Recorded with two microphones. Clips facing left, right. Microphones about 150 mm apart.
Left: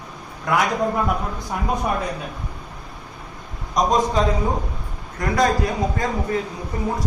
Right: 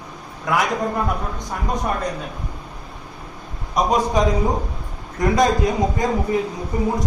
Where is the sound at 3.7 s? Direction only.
10° right (ahead or behind).